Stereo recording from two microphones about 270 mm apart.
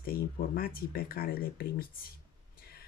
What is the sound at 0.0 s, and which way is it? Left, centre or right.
Speech, left.